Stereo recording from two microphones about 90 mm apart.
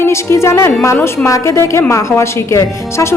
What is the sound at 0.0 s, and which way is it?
A woman's voice, 30° left (ahead or behind).